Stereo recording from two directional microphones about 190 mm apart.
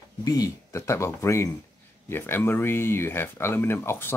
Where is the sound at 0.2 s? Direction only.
20° left (ahead or behind).